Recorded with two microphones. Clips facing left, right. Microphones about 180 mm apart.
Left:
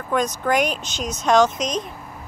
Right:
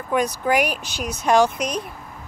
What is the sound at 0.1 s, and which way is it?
Speech, 10° right (ahead or behind).